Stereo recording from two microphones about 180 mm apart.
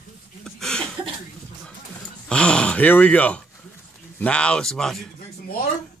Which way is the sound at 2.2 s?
5° left (ahead or behind).